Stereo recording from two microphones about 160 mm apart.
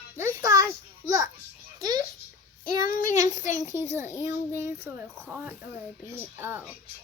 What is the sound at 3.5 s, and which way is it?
A child's voice, 15° right (ahead or behind).